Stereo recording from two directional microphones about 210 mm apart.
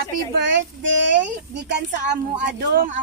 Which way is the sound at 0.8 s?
60° right (ahead or behind).